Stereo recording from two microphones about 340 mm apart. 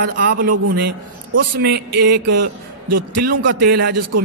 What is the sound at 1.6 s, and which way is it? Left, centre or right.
Speech, right.